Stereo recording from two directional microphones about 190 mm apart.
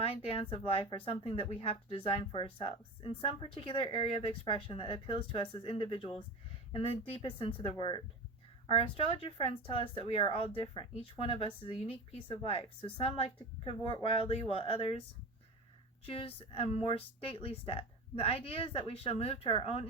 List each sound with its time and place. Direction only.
0.5 s speech: 30° left (ahead or behind)
9.1 s speech: 30° left (ahead or behind)
16.0 s speech: 30° left (ahead or behind)